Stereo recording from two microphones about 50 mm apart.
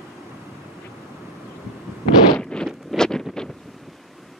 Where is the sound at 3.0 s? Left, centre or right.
Centre.